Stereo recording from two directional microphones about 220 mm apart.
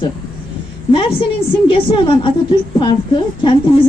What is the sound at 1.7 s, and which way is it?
A woman's voice, 20° left (ahead or behind).